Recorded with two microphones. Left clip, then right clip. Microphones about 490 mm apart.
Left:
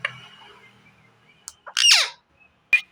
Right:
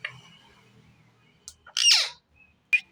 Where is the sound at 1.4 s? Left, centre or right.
Right.